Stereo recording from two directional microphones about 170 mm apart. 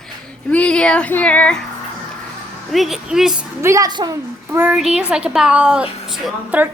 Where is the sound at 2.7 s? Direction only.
Centre (ahead or behind).